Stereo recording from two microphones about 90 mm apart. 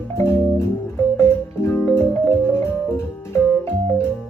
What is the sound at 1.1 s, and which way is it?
Music, 30° left (ahead or behind).